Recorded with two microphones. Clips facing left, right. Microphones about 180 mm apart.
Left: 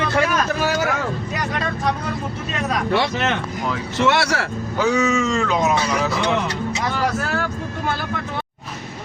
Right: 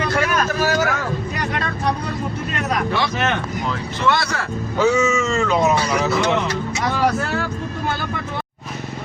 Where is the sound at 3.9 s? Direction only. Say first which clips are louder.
Left 3 dB; 75° left (ahead or behind).